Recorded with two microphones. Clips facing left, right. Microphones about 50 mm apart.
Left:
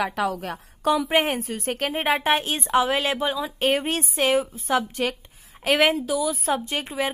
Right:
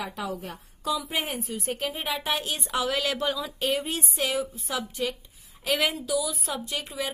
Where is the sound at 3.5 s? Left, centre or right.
Left.